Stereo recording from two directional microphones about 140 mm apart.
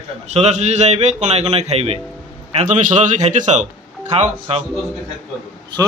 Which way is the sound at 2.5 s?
60° right (ahead or behind).